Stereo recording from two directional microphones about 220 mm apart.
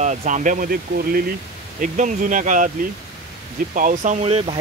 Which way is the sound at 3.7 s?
35° right (ahead or behind).